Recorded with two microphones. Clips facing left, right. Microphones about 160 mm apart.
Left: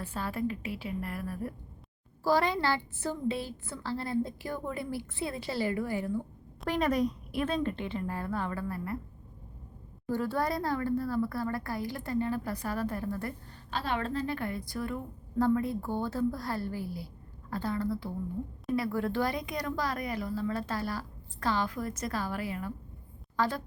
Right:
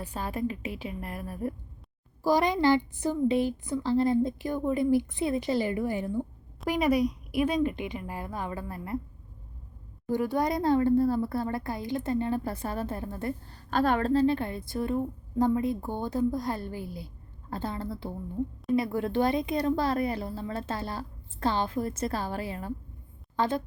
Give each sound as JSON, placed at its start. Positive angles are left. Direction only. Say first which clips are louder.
{"t": 0.0, "sound": "a woman's voice", "louder": "right 2 dB", "side_deg": -15}
{"t": 10.1, "sound": "a woman's voice", "louder": "right 3 dB", "side_deg": -15}
{"t": 13.7, "sound": "a woman's voice", "louder": "right 7 dB", "side_deg": -50}
{"t": 14.1, "sound": "a woman's voice", "louder": "right 8 dB", "side_deg": -30}